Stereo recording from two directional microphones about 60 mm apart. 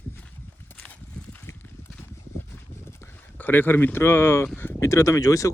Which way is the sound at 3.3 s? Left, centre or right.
Left.